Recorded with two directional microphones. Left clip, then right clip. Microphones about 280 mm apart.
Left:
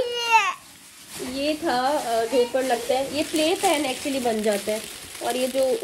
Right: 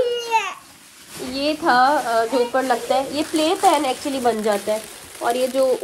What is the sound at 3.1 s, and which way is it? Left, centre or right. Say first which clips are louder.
Speech: right 3 dB; right.